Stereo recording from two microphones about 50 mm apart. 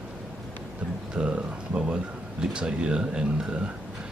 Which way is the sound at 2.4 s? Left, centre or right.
Centre.